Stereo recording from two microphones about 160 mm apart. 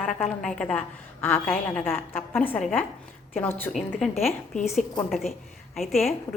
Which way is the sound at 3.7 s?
Centre (ahead or behind).